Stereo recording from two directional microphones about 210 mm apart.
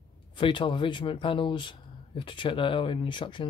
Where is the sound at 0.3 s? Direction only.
25° left (ahead or behind).